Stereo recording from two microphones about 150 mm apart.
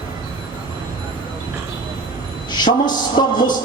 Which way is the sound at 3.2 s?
30° left (ahead or behind).